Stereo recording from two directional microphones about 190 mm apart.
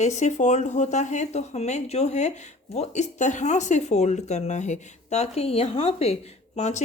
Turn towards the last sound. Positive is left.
turn(degrees=35)  # may be behind; listen again after turning